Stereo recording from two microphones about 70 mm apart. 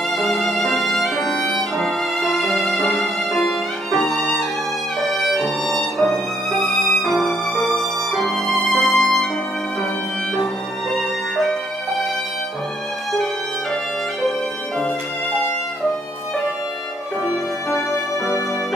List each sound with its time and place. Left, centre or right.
0.1 s violin: centre
6.6 s music: centre
11.0 s music: centre
17.7 s music: left